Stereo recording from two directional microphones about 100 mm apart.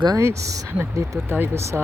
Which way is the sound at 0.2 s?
30° right (ahead or behind).